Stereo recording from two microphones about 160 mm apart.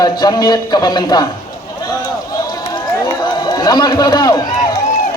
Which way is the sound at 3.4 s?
25° left (ahead or behind).